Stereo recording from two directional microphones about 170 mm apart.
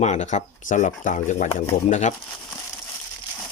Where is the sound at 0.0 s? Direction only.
40° left (ahead or behind).